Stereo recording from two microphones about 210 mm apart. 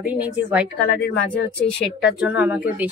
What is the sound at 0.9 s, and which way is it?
Speech, 50° left (ahead or behind).